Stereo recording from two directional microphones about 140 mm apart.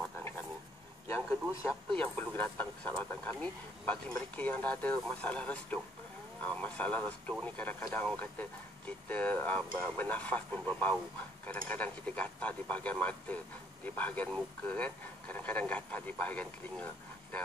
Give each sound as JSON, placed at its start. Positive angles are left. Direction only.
{"t": 1.0, "sound": "speech", "side_deg": 20}